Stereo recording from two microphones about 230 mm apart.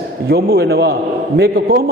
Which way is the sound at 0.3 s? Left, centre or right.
Right.